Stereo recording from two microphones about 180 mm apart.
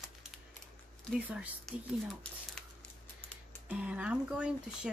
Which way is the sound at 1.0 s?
5° right (ahead or behind).